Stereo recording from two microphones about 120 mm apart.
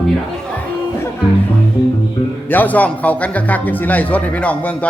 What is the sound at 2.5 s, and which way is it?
Speech, 15° left (ahead or behind).